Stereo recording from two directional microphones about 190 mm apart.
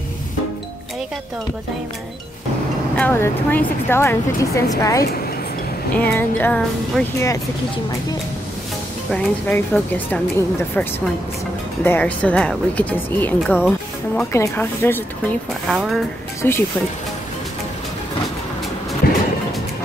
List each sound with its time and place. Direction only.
3.0 s speech: 10° left (ahead or behind)
9.1 s speech: 5° left (ahead or behind)
11.8 s speech: 10° left (ahead or behind)
15.7 s speech: 5° right (ahead or behind)
16.4 s speech: 10° left (ahead or behind)
19.0 s music: 50° left (ahead or behind)